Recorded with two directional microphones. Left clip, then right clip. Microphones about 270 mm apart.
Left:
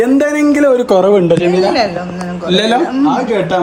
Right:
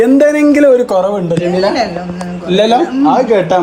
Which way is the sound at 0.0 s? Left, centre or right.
Centre.